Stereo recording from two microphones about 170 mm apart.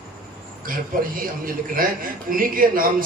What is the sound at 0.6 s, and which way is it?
A man's voice, 55° right (ahead or behind).